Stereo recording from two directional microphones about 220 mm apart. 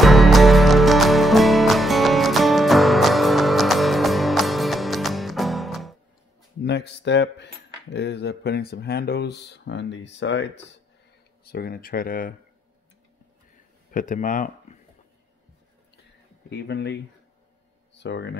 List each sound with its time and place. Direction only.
0.0 s music: centre (ahead or behind)
6.6 s cutlery: 50° left (ahead or behind)
11.4 s speech: 45° left (ahead or behind)
13.9 s speech: 35° left (ahead or behind)
16.4 s cutlery: 50° left (ahead or behind)
17.9 s speech: 50° left (ahead or behind)